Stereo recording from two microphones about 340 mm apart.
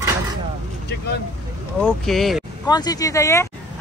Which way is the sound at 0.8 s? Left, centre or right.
Left.